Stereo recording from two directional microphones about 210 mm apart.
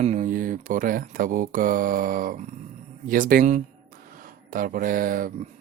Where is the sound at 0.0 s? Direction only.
35° right (ahead or behind).